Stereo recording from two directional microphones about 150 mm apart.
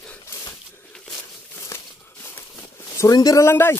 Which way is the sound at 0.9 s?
5° left (ahead or behind).